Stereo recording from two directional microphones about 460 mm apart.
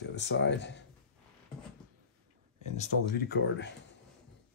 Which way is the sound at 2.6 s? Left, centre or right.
Centre.